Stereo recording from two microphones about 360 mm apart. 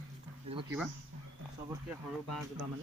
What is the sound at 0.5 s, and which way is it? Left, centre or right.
Speech, centre.